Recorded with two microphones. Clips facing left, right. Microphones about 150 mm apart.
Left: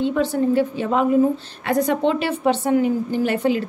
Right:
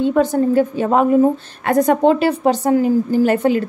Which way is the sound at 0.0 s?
45° right (ahead or behind).